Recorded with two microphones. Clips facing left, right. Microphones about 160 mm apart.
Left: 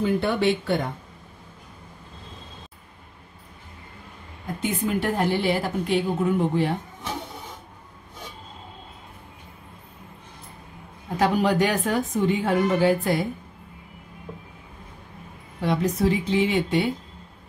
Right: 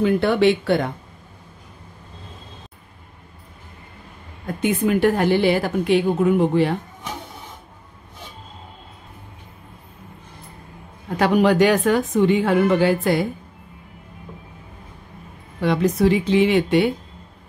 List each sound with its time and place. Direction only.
0.0 s a woman's voice: 75° right (ahead or behind)
4.6 s a woman's voice: 65° right (ahead or behind); by 6.7 s 90° right
11.1 s speech: 75° right (ahead or behind); by 13.2 s 90° right
15.6 s a woman's voice: 75° right (ahead or behind)